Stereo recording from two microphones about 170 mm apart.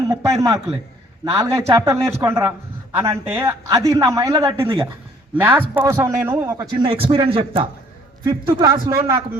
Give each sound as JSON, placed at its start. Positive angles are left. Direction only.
{"t": 0.1, "sound": "a woman's voice", "side_deg": -20}
{"t": 6.8, "sound": "a man's voice", "side_deg": -30}